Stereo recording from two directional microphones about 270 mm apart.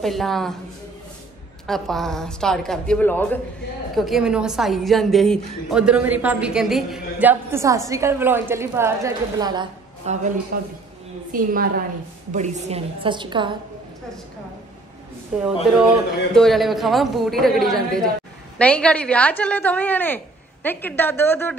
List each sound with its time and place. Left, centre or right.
0.0 s a woman's voice: centre
1.7 s a woman's voice: centre; by 10.3 s right
10.5 s a woman's voice: right
16.3 s a woman's voice: centre